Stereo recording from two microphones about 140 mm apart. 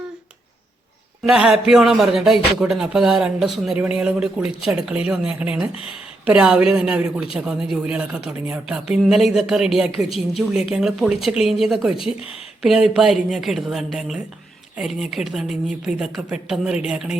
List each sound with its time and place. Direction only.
1.2 s a man's voice: 5° right (ahead or behind)
11.9 s speech: 40° left (ahead or behind)
12.6 s a man's voice: centre (ahead or behind)